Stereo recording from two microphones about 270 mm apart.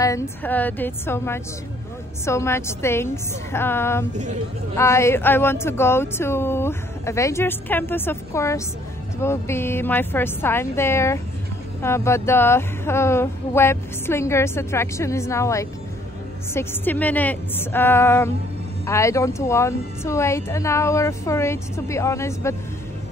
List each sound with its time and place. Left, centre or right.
0.0 s speech: centre
4.1 s speech: right
4.7 s speech: centre